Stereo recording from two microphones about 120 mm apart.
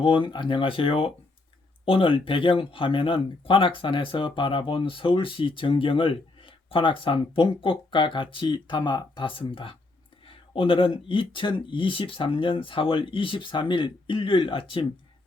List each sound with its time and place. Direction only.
0.0 s speech: 45° left (ahead or behind)